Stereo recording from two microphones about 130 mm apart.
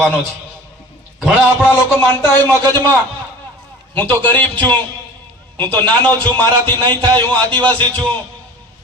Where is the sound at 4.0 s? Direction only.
15° left (ahead or behind).